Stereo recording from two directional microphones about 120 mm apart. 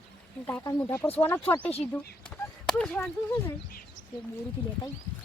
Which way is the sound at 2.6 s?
10° left (ahead or behind).